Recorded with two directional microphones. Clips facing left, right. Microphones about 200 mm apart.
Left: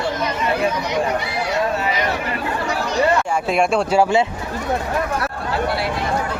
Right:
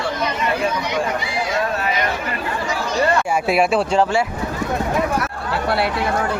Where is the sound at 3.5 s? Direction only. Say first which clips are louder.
Right 1 dB; 5° right (ahead or behind).